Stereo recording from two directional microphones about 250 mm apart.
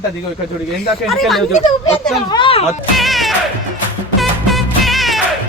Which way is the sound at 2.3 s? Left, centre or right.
Left.